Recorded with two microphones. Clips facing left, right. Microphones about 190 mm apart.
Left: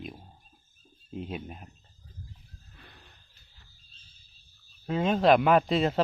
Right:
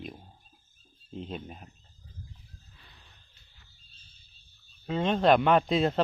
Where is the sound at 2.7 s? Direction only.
60° left (ahead or behind).